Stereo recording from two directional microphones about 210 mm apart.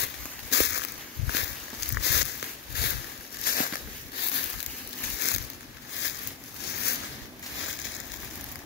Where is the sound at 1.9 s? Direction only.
55° left (ahead or behind).